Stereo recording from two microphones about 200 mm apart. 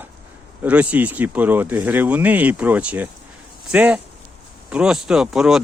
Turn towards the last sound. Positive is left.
turn(degrees=0)  # may be behind; listen again after turning